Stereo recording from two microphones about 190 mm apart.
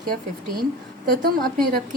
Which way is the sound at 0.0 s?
50° right (ahead or behind).